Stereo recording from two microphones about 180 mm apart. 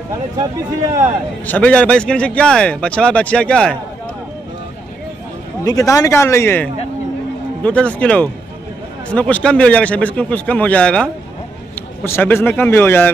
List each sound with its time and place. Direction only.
1.4 s a man's voice: 10° left (ahead or behind)
5.6 s a man's voice: 20° left (ahead or behind)